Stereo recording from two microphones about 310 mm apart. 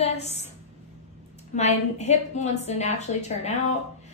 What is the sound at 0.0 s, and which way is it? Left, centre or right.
Speech, left.